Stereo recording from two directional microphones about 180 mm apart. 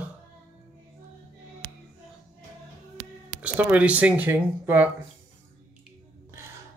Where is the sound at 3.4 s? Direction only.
10° right (ahead or behind).